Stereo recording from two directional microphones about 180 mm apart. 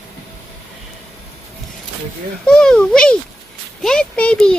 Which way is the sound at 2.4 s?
5° left (ahead or behind).